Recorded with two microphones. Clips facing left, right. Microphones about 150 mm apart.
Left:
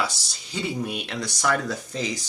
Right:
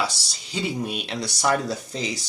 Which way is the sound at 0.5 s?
20° right (ahead or behind).